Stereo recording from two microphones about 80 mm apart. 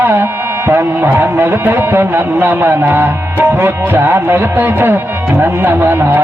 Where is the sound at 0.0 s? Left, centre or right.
Right.